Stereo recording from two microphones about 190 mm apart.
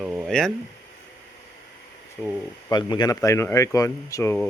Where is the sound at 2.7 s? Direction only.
25° left (ahead or behind).